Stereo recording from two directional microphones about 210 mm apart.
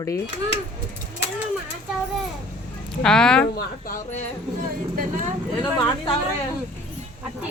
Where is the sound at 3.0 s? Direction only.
5° left (ahead or behind).